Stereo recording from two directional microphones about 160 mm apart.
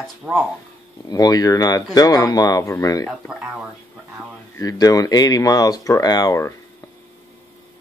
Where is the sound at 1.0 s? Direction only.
25° left (ahead or behind).